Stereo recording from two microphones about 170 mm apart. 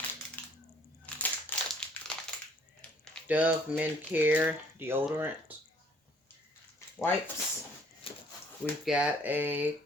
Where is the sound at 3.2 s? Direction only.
10° right (ahead or behind).